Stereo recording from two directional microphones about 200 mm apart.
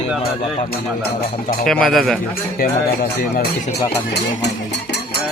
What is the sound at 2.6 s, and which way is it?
Speech, 45° left (ahead or behind).